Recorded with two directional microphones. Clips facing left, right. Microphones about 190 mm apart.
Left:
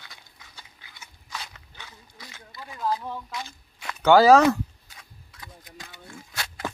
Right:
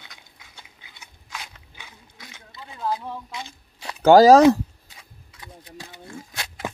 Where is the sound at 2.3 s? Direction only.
20° right (ahead or behind).